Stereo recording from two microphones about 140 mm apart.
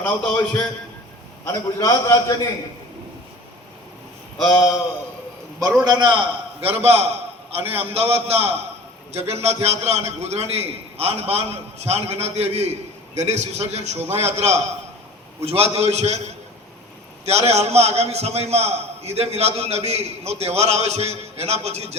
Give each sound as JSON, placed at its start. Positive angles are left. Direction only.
{"t": 0.0, "sound": "a man's voice", "side_deg": 10}
{"t": 1.5, "sound": "a man's voice", "side_deg": 25}
{"t": 4.4, "sound": "a man's voice", "side_deg": 5}
{"t": 5.8, "sound": "a man's voice", "side_deg": -30}
{"t": 17.2, "sound": "a man's voice", "side_deg": -50}